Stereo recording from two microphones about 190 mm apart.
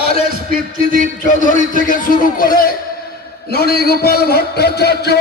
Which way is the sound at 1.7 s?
45° left (ahead or behind).